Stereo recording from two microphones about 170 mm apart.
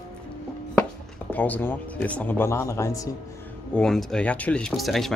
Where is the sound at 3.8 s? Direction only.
5° left (ahead or behind).